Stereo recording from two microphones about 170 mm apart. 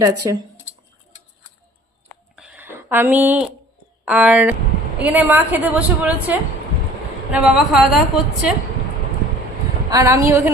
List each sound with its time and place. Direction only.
0.2 s speech: 25° right (ahead or behind)
2.3 s a sound: 10° right (ahead or behind)
4.0 s a woman's voice: 10° right (ahead or behind)
9.9 s a woman's voice: 20° right (ahead or behind)